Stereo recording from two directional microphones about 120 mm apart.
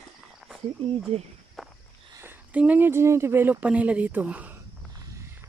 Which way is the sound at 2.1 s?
15° right (ahead or behind).